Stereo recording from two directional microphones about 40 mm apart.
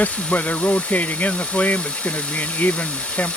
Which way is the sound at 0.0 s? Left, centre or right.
Left.